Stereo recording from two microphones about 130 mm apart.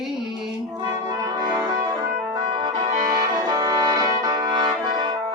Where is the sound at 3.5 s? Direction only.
30° right (ahead or behind).